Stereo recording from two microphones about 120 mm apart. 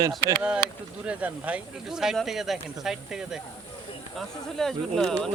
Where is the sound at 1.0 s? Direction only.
10° right (ahead or behind).